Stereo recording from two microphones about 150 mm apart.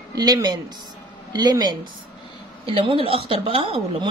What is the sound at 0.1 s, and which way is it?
A woman's voice, 25° right (ahead or behind).